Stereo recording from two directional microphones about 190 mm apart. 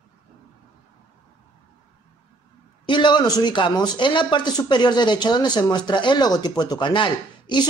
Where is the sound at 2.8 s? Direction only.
25° left (ahead or behind).